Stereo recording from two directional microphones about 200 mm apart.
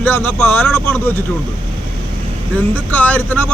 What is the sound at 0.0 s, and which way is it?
A man's voice, 10° left (ahead or behind).